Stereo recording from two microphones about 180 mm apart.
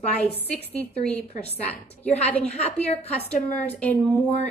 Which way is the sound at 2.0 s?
40° left (ahead or behind).